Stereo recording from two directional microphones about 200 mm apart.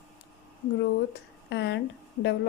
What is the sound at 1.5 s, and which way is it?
Speech, 60° left (ahead or behind).